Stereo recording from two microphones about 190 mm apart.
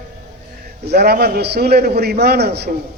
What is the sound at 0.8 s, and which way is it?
A man's voice, 55° right (ahead or behind).